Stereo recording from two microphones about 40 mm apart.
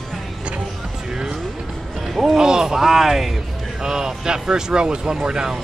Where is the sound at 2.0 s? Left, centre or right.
Centre.